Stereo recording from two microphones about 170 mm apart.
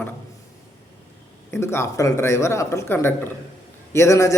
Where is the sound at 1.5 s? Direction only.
15° left (ahead or behind).